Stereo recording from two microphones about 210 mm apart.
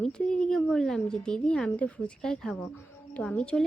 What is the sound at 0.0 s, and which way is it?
A woman's voice, 5° left (ahead or behind).